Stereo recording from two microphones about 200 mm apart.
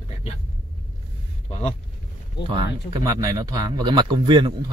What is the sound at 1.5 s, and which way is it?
Vehicle, 35° left (ahead or behind).